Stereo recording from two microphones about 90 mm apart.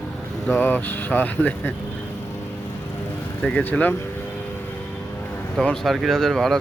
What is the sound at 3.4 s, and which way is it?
Speech, 15° left (ahead or behind).